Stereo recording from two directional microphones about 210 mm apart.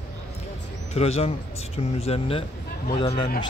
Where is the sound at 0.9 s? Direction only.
30° left (ahead or behind).